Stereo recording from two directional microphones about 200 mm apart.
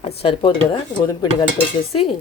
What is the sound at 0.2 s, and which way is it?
Speech, 25° left (ahead or behind).